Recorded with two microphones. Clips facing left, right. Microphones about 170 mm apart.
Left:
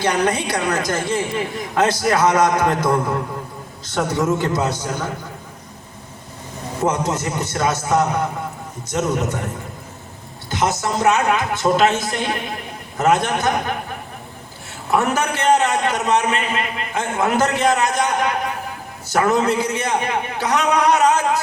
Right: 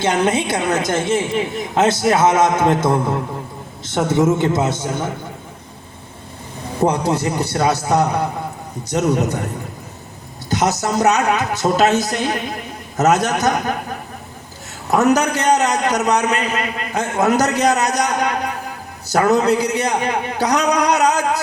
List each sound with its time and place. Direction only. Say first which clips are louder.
0.0 s a woman's voice: right 2 dB; 25° right (ahead or behind)
6.8 s a man's voice: right 3 dB; 35° right (ahead or behind)
10.5 s a man's voice: right 2 dB; 40° right (ahead or behind)
14.8 s a man's voice: right 4 dB; 40° right (ahead or behind)